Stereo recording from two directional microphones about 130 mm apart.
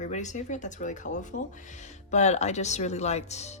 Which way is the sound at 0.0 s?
65° left (ahead or behind).